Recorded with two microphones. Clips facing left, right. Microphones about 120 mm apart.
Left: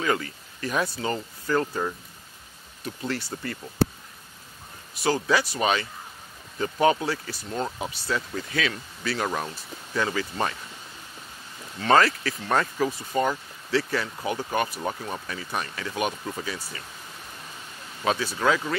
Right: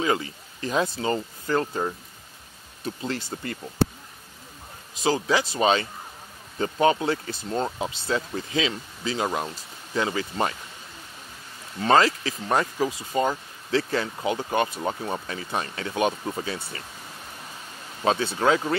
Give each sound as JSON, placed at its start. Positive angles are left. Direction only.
{"t": 0.0, "sound": "speech", "side_deg": -25}
{"t": 5.3, "sound": "speech", "side_deg": -25}
{"t": 11.9, "sound": "speech", "side_deg": -25}
{"t": 18.0, "sound": "speech", "side_deg": -25}